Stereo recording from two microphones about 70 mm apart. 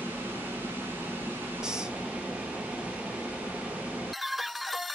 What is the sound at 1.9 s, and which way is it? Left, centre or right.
Vehicle, centre.